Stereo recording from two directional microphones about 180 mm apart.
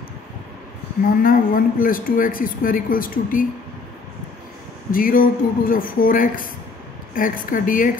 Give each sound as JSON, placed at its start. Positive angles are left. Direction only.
{"t": 1.2, "sound": "a man's voice", "side_deg": 50}
{"t": 4.9, "sound": "a man's voice", "side_deg": 50}